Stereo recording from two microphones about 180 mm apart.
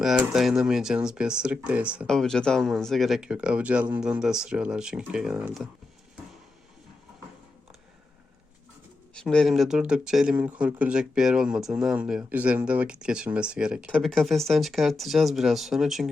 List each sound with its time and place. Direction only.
0.0 s speech: centre (ahead or behind)
9.1 s speech: 5° left (ahead or behind)